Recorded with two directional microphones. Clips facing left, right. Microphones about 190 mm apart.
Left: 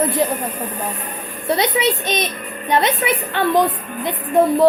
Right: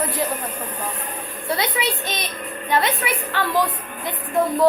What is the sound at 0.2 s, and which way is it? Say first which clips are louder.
Speech: left 3 dB; 25° left (ahead or behind).